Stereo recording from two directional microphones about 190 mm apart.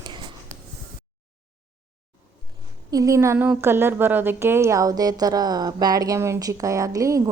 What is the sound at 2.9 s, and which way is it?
A woman's voice, 15° right (ahead or behind).